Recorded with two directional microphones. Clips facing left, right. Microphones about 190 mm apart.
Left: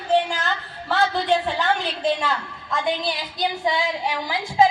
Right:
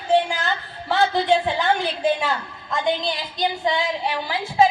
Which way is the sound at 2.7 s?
10° left (ahead or behind).